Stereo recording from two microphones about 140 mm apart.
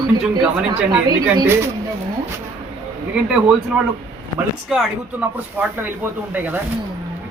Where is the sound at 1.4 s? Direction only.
20° right (ahead or behind).